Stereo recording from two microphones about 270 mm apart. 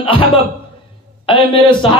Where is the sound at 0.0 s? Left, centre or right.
Centre.